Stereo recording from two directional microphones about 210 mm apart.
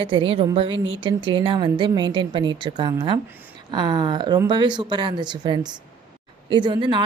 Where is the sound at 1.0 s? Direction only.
25° right (ahead or behind).